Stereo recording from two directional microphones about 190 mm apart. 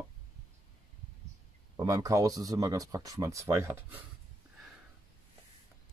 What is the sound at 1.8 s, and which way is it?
Speech, 15° right (ahead or behind).